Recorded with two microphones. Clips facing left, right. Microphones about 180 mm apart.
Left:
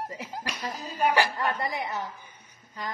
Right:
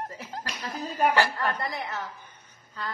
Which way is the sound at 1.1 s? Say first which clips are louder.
Even; 15° left (ahead or behind).